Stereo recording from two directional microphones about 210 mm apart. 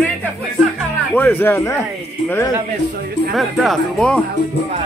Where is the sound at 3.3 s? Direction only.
Centre (ahead or behind).